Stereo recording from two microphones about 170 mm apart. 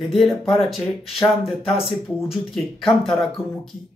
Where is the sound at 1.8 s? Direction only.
Centre (ahead or behind).